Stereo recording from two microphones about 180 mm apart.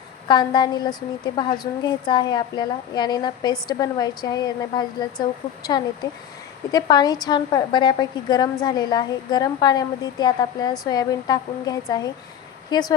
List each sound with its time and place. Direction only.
0.3 s a woman's voice: 25° left (ahead or behind)